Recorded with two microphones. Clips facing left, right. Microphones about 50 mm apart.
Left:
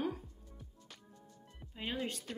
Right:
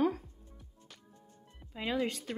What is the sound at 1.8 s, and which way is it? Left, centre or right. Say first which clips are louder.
Speech: right 6 dB; right.